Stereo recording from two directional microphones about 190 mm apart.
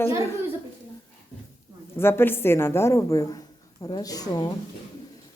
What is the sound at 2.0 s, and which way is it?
A woman's voice, 10° left (ahead or behind).